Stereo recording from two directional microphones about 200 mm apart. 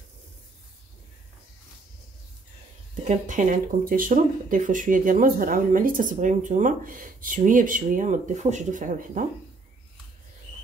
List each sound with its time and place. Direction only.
2.9 s speech: 40° right (ahead or behind)